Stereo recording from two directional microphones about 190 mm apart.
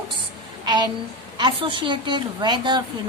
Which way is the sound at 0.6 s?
25° right (ahead or behind).